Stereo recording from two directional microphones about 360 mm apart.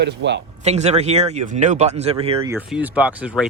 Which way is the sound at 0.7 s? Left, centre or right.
Centre.